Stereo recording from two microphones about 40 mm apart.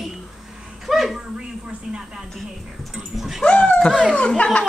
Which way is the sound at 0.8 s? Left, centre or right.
Centre.